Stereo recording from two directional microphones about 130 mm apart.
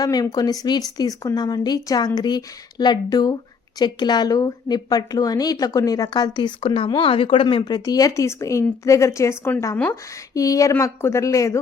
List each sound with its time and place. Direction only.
0.0 s speech: 30° left (ahead or behind)